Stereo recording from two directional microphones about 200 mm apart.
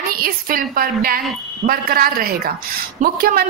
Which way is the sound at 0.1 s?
45° right (ahead or behind).